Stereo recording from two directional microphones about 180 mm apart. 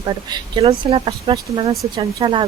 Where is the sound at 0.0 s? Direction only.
25° right (ahead or behind).